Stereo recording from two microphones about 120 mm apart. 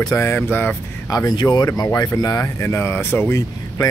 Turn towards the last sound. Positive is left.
turn(degrees=25)  # may be behind; listen again after turning